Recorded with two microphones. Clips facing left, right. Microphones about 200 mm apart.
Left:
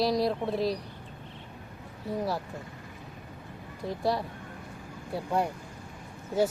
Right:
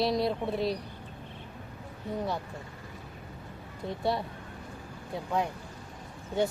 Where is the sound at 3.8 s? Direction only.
Centre (ahead or behind).